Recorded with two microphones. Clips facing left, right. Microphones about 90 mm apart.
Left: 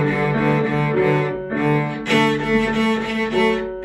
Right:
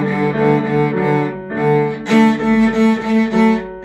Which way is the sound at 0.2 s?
20° right (ahead or behind).